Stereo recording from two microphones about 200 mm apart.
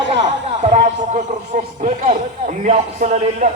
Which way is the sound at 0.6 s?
35° right (ahead or behind).